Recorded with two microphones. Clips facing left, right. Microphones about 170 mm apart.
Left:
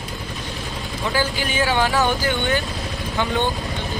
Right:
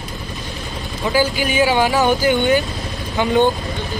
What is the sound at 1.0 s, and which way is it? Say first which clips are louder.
Speech: right 5 dB; 15° right (ahead or behind).